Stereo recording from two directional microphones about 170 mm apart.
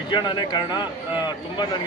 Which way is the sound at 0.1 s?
25° left (ahead or behind).